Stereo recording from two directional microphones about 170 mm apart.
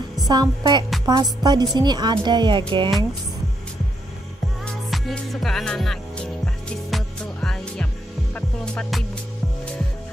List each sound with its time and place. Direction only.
0.3 s speech: 25° right (ahead or behind)
4.9 s music: centre (ahead or behind)